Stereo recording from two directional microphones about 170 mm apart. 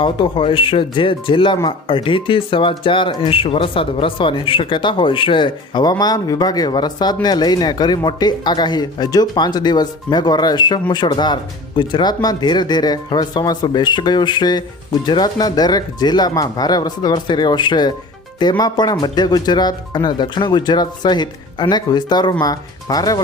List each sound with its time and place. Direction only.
0.0 s speech: 30° left (ahead or behind)